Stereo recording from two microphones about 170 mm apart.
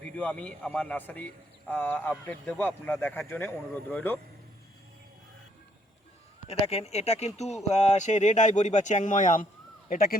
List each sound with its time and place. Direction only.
0.2 s a man's voice: 10° left (ahead or behind)
6.5 s speech: 40° left (ahead or behind); by 10.2 s 60° left (ahead or behind)